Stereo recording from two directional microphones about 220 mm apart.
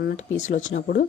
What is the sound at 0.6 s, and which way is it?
Speech, 50° left (ahead or behind).